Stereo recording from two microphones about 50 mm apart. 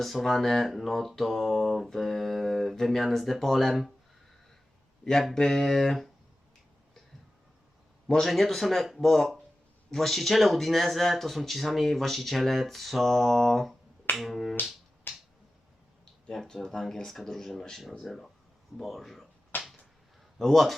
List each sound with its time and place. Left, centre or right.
0.0 s speech: centre
5.3 s speech: centre
8.0 s speech: centre
15.1 s finger snapping: left
16.3 s speech: centre
19.5 s a sound: left
20.4 s speech: centre